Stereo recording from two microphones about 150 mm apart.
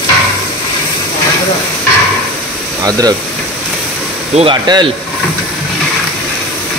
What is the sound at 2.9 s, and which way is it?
Speech, 25° right (ahead or behind).